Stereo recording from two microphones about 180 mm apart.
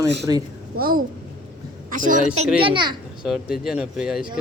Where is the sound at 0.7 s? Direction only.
55° right (ahead or behind).